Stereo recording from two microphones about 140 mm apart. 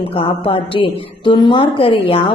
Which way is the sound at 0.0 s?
40° left (ahead or behind).